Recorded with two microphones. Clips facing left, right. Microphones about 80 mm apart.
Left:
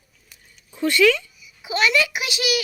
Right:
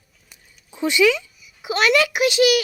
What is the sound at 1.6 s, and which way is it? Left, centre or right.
Speech, right.